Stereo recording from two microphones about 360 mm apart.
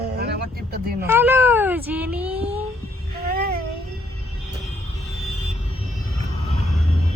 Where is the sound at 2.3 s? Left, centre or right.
Centre.